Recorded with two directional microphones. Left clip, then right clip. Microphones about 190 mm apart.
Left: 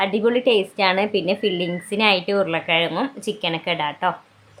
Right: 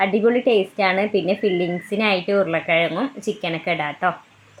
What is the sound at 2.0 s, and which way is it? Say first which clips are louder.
A woman's voice: left 1 dB; 10° right (ahead or behind).